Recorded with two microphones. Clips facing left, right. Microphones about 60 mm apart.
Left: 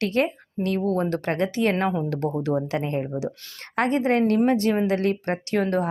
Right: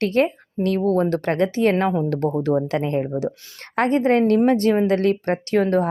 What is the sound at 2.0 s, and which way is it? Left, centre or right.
Speech, right.